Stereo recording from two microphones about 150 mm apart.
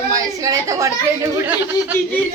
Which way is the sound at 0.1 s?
25° right (ahead or behind).